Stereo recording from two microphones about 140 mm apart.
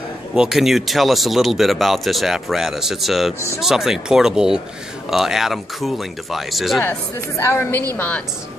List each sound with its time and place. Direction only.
0.3 s speech: 5° right (ahead or behind)
6.8 s a woman's voice: 15° left (ahead or behind)